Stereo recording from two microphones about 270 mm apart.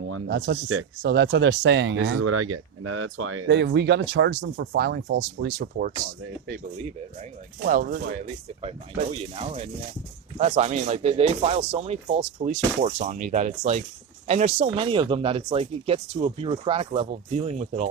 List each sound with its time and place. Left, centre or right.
0.3 s speech: right